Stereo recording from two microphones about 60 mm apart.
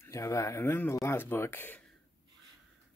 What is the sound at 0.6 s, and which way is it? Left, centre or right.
Speech, left.